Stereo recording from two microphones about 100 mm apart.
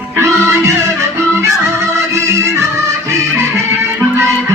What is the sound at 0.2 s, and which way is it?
Music, 30° right (ahead or behind).